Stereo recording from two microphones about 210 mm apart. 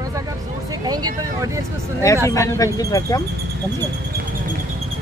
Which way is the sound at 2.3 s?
15° left (ahead or behind).